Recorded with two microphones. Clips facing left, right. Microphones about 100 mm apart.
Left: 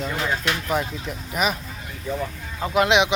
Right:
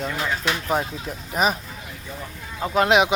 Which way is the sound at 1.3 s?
35° right (ahead or behind).